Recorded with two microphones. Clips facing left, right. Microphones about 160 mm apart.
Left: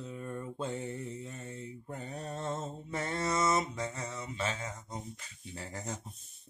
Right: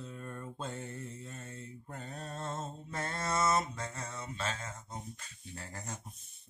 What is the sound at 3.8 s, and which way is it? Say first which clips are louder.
Mantra: left 4 dB; 15° left (ahead or behind).